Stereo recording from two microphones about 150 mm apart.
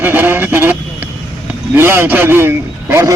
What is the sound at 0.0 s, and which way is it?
Vehicle, 15° right (ahead or behind).